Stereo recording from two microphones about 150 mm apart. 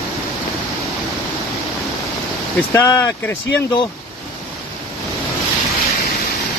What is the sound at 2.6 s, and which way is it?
Speech, 20° left (ahead or behind).